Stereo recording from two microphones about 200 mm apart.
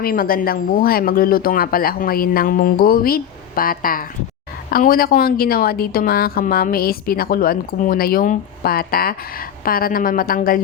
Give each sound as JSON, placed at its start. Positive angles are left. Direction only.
{"t": 0.0, "sound": "a woman's voice", "side_deg": 45}